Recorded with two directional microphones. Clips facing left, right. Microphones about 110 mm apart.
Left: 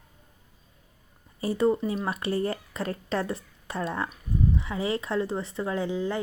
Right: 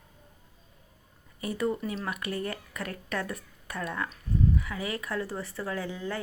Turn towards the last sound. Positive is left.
turn(degrees=20)  # may be behind; listen again after turning